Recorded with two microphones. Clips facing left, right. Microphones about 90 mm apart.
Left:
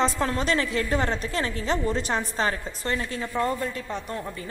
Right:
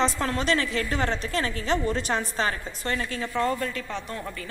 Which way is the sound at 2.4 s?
35° left (ahead or behind).